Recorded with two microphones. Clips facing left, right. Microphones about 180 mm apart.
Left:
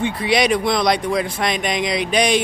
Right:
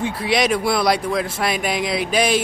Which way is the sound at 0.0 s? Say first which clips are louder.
Left 2 dB; centre (ahead or behind).